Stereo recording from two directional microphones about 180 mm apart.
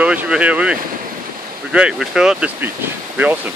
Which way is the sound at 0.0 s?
5° right (ahead or behind).